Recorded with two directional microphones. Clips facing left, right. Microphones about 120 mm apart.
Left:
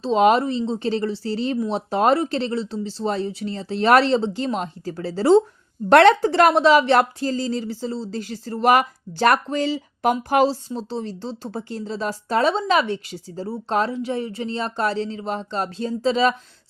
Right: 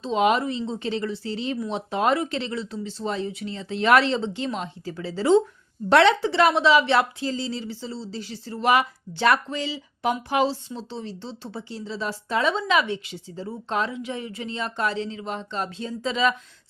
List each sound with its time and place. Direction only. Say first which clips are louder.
0.0 s a woman's voice: left 5 dB; 35° left (ahead or behind)
5.9 s a woman's voice: left 5 dB; 50° left (ahead or behind); by 16.3 s 35° left (ahead or behind)